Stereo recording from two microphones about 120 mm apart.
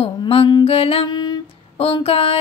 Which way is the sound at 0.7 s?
55° left (ahead or behind).